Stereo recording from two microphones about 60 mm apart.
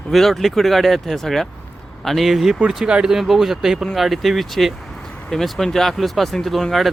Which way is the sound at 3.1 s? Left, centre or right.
Centre.